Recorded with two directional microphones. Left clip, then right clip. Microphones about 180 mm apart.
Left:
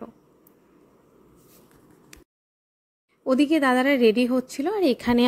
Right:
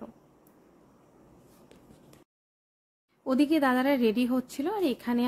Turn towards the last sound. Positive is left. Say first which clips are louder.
# left 8 dB
turn(degrees=35)  # may be behind; listen again after turning